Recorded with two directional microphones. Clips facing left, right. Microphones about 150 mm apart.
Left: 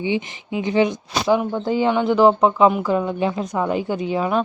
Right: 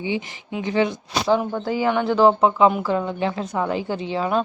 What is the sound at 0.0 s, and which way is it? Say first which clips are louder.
Speech: left 3 dB; 20° left (ahead or behind).